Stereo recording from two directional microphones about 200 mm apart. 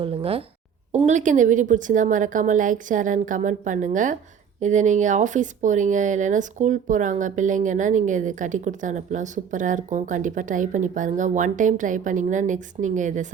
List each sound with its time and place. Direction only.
0.0 s speech: 30° right (ahead or behind)